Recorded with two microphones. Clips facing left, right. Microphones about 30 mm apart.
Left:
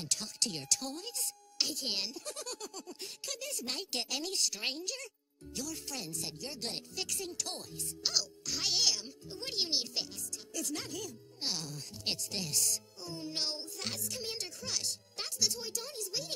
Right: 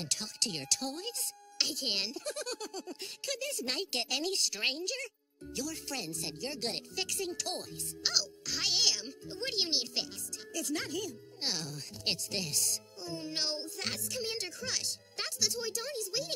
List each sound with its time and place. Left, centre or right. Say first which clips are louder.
0.0 s a child's voice: right 1 dB; centre
13.0 s a child's voice: right 2 dB; right